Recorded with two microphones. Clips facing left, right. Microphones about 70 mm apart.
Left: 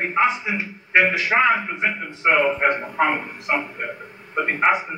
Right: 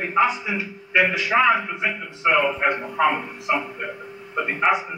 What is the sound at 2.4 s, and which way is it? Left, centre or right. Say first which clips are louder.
A man's voice: left 2 dB; left.